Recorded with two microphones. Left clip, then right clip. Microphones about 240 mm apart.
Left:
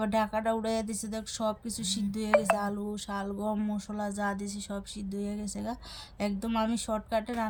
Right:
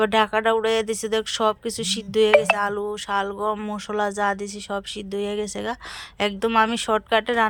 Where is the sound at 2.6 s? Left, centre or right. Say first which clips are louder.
Right 11 dB; right.